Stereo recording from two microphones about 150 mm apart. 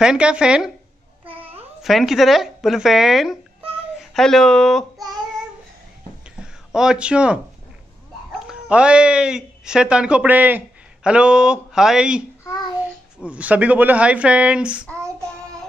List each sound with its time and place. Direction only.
0.0 s speech: 5° right (ahead or behind)
1.3 s babbling: 40° right (ahead or behind)
1.8 s speech: centre (ahead or behind)
6.4 s speech: 5° right (ahead or behind)
13.2 s speech: 10° right (ahead or behind)